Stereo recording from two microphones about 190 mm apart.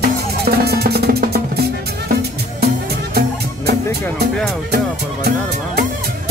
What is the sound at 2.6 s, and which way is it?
Music, 55° right (ahead or behind).